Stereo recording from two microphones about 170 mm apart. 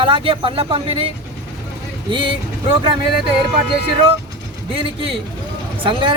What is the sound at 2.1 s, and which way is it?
Speech, 30° right (ahead or behind).